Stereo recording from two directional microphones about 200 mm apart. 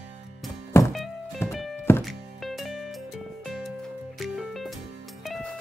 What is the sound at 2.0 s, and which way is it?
Music, centre (ahead or behind).